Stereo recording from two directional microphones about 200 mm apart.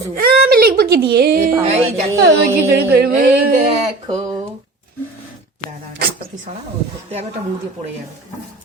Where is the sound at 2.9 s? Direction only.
50° right (ahead or behind).